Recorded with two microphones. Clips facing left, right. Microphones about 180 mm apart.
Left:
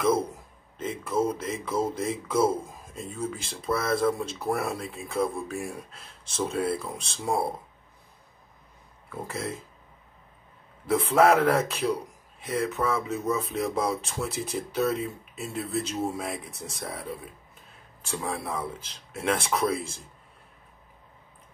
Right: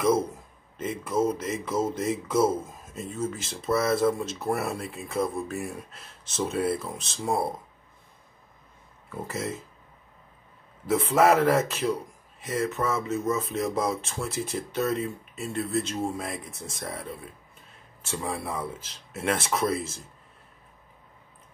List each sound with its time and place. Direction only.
0.8 s a man's voice: 5° right (ahead or behind)
9.1 s a man's voice: 5° right (ahead or behind)
10.9 s a man's voice: centre (ahead or behind)